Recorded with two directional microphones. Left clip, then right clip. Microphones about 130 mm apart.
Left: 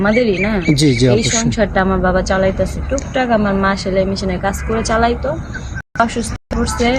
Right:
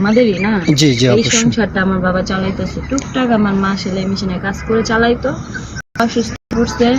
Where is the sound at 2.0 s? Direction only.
50° left (ahead or behind).